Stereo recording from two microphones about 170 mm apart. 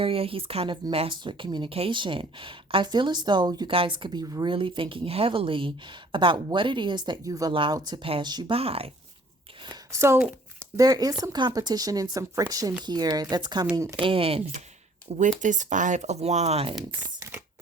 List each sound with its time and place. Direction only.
0.0 s speech: 30° right (ahead or behind)
9.6 s speech: 15° right (ahead or behind)
13.7 s speech: 15° right (ahead or behind)
14.0 s speech: 35° right (ahead or behind)
15.2 s speech: 45° right (ahead or behind)